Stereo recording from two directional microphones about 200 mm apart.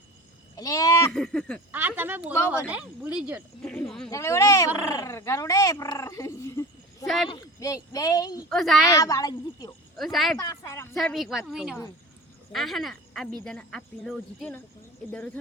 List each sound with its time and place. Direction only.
0.5 s a sound: 15° left (ahead or behind)
1.1 s speech: 5° left (ahead or behind)
1.7 s speech: 10° right (ahead or behind)
3.6 s cricket: 5° left (ahead or behind)
4.1 s speech: 15° left (ahead or behind)
8.4 s speech: centre (ahead or behind)
8.8 s speech: 15° left (ahead or behind)
10.0 s speech: centre (ahead or behind)
10.4 s a sound: 15° left (ahead or behind)
10.9 s speech: centre (ahead or behind)